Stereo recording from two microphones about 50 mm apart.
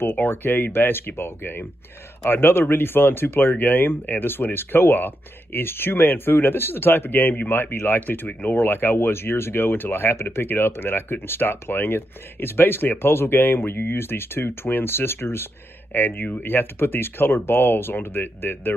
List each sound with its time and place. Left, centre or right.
0.0 s speech: left
8.3 s speech: left
8.5 s speech: left
15.9 s speech: left